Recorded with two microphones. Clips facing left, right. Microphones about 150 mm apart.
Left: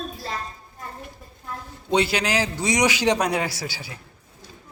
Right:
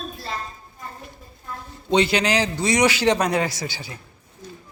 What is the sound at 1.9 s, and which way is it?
A man's voice, 5° left (ahead or behind).